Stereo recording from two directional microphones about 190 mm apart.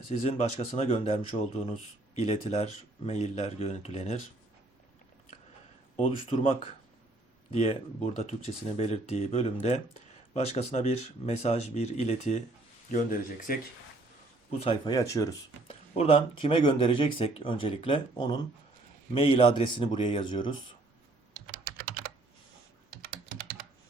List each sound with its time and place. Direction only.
0.1 s speech: 35° left (ahead or behind)
6.0 s speech: 30° left (ahead or behind); by 13.6 s 45° left (ahead or behind)
14.6 s speech: 25° left (ahead or behind)
15.6 s speech: 30° left (ahead or behind)
21.8 s computer keyboard: 55° right (ahead or behind)